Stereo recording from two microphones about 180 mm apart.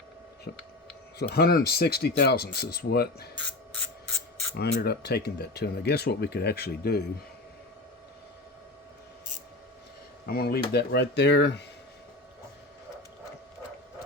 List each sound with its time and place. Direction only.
0.5 s speech: 65° left (ahead or behind)
4.5 s speech: 65° left (ahead or behind)
10.2 s speech: 60° left (ahead or behind); by 11.6 s 75° left (ahead or behind)